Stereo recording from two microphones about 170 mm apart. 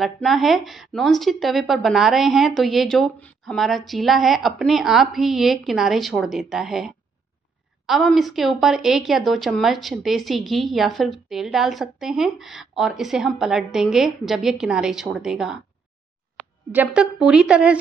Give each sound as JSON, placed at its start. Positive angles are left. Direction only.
{"t": 0.0, "sound": "speech", "side_deg": 0}